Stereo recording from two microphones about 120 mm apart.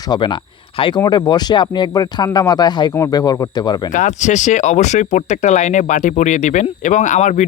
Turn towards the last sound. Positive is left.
turn(degrees=85)